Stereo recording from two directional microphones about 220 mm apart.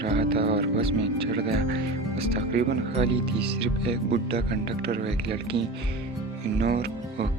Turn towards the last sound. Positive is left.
turn(degrees=-45)  # may be behind; listen again after turning